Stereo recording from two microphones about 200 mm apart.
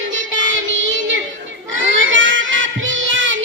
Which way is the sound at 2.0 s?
70° right (ahead or behind).